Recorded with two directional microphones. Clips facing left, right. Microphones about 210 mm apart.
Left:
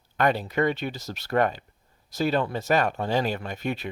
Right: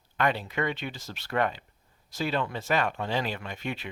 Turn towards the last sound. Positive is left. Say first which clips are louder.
# left 5 dB
turn(degrees=40)  # may be behind; listen again after turning